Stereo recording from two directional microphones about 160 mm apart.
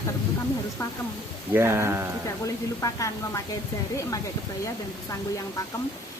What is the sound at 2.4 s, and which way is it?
Speech, 20° left (ahead or behind).